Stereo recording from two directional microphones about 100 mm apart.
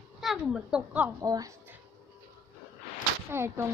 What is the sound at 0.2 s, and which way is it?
Speech, 5° right (ahead or behind).